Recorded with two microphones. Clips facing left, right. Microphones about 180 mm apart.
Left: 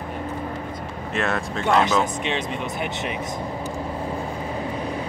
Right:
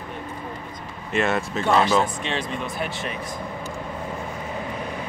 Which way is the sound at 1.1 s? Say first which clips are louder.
Right 2 dB; centre (ahead or behind).